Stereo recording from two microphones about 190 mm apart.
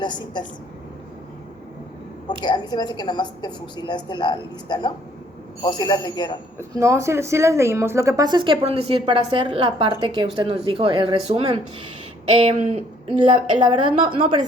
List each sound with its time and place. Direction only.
0.0 s a woman's voice: 25° left (ahead or behind)
2.4 s a woman's voice: 20° left (ahead or behind)
6.6 s speech: 15° right (ahead or behind)